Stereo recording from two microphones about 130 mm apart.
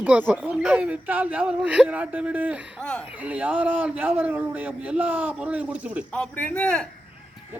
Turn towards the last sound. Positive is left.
turn(degrees=5)  # may be behind; listen again after turning